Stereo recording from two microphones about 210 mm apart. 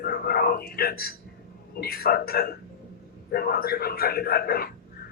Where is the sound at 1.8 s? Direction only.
45° left (ahead or behind).